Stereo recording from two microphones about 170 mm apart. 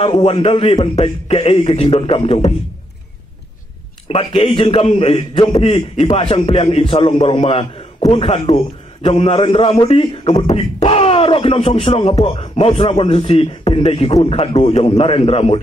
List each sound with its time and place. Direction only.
0.0 s speech: 30° left (ahead or behind)
4.1 s speech: 30° left (ahead or behind)